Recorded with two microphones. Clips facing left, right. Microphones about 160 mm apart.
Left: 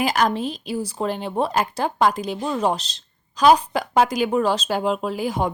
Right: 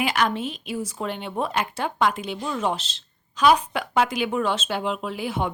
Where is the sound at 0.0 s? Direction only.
40° left (ahead or behind).